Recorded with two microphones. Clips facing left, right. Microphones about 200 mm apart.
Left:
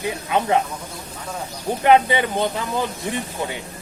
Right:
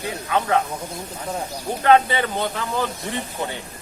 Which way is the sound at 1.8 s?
15° left (ahead or behind).